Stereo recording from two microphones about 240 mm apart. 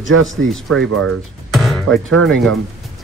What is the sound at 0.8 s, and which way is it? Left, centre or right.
Speech, right.